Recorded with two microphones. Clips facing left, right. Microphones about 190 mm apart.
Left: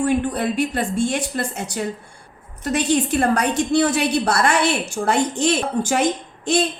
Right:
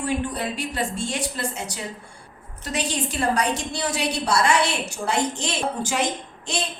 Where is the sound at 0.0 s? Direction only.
55° left (ahead or behind).